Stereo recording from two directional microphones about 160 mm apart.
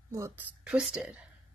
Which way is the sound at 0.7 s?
5° right (ahead or behind).